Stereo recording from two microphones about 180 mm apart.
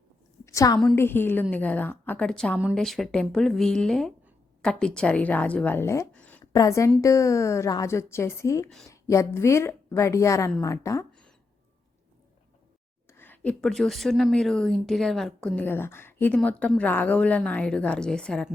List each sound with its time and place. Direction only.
0.4 s a sound: 20° left (ahead or behind)
0.9 s speech: 10° left (ahead or behind)
6.4 s a woman's voice: 20° left (ahead or behind)
13.1 s speech: 10° left (ahead or behind)